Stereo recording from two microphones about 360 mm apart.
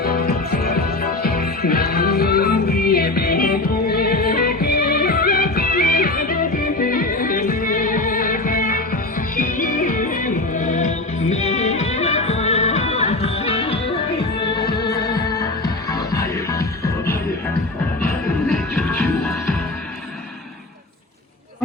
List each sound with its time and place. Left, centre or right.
0.0 s music: left
15.1 s music: centre
18.4 s music: centre